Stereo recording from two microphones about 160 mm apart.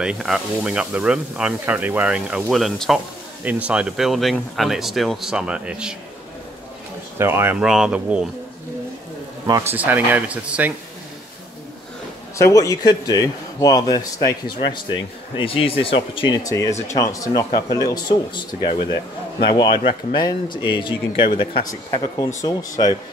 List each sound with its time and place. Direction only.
0.0 s speech: 5° right (ahead or behind)
7.2 s speech: 15° right (ahead or behind)
7.6 s speech: 5° right (ahead or behind)
9.5 s speech: 15° right (ahead or behind)
12.4 s a man's voice: 20° left (ahead or behind)
16.4 s a man's voice: 20° left (ahead or behind)